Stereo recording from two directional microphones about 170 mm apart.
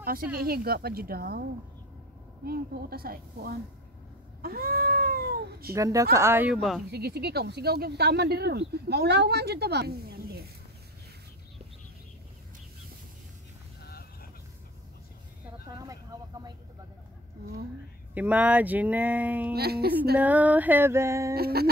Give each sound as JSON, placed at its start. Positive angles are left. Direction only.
{"t": 0.4, "sound": "speech", "side_deg": -65}
{"t": 2.4, "sound": "speech", "side_deg": -65}
{"t": 4.4, "sound": "cat", "side_deg": -60}
{"t": 5.8, "sound": "speech", "side_deg": -20}
{"t": 6.5, "sound": "speech", "side_deg": 0}
{"t": 6.9, "sound": "speech", "side_deg": -70}
{"t": 13.8, "sound": "vehicle", "side_deg": 65}
{"t": 15.6, "sound": "vehicle", "side_deg": -20}
{"t": 18.1, "sound": "speech", "side_deg": -10}
{"t": 19.5, "sound": "speech", "side_deg": -70}
{"t": 20.2, "sound": "speech", "side_deg": -10}
{"t": 21.4, "sound": "speech", "side_deg": -65}